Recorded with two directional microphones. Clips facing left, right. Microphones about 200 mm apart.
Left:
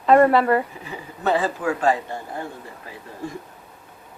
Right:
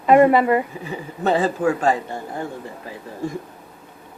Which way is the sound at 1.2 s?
25° right (ahead or behind).